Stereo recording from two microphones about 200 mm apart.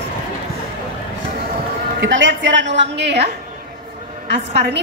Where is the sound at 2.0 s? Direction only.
70° right (ahead or behind).